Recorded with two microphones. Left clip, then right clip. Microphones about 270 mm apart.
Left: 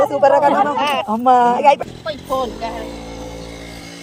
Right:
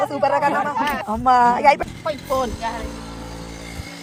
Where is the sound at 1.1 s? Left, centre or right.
Right.